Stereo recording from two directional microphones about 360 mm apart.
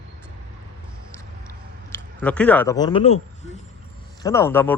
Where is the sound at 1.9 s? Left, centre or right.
Centre.